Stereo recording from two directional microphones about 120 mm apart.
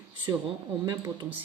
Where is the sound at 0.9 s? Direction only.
35° right (ahead or behind).